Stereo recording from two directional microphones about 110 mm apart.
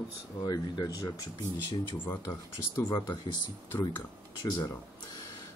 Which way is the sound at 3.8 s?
40° left (ahead or behind).